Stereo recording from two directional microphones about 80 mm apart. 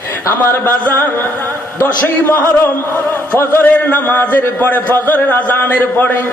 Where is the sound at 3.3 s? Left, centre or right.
Left.